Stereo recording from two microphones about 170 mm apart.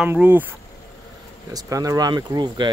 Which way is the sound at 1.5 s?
20° right (ahead or behind).